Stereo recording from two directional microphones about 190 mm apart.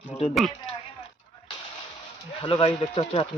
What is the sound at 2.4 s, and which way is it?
Speech, 25° left (ahead or behind).